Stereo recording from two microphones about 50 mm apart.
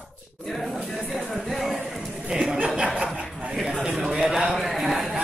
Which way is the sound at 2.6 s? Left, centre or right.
Right.